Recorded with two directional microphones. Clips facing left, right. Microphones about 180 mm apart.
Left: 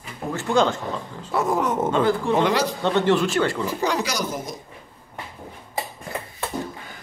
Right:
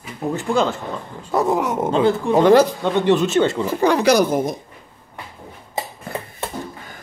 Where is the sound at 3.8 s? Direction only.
55° right (ahead or behind).